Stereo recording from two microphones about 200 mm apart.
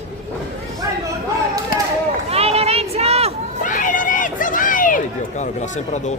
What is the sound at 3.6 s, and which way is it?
Run, 40° left (ahead or behind).